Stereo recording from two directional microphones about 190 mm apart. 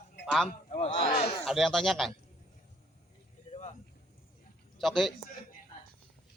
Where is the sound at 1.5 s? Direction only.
Centre (ahead or behind).